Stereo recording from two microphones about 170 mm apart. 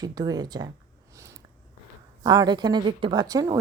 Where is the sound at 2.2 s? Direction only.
25° right (ahead or behind).